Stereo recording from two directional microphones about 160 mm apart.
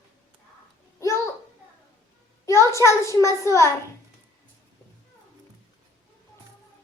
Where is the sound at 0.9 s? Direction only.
20° left (ahead or behind).